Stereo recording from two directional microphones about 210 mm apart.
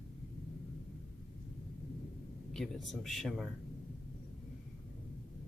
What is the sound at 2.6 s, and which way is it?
Speech, centre (ahead or behind).